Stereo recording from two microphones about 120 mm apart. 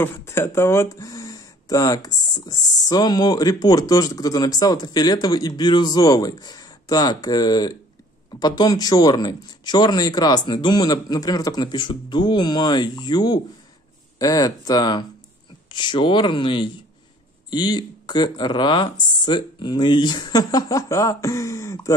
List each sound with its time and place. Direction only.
0.0 s speech: 20° left (ahead or behind)